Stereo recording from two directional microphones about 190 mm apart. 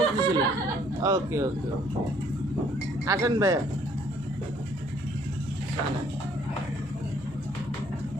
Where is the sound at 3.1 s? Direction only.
15° right (ahead or behind).